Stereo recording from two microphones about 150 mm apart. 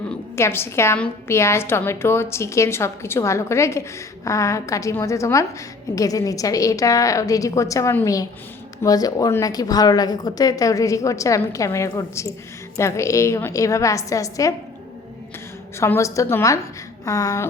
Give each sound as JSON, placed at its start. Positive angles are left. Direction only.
{"t": 0.3, "sound": "a woman's voice", "side_deg": 15}
{"t": 15.8, "sound": "a woman's voice", "side_deg": 20}